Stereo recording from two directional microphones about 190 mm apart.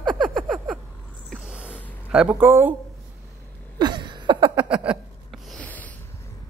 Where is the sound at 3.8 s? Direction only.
25° right (ahead or behind).